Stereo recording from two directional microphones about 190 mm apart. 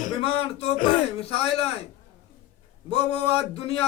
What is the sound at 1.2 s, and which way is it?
Speech, 30° left (ahead or behind).